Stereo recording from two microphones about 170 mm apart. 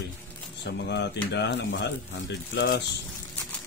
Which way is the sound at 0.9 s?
90° left.